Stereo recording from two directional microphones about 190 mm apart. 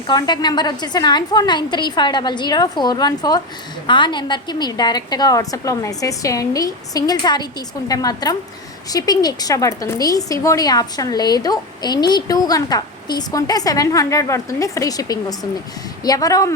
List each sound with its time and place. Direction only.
0.1 s a woman's voice: 20° left (ahead or behind)